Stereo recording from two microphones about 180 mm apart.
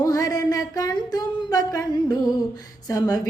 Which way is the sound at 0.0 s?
20° left (ahead or behind).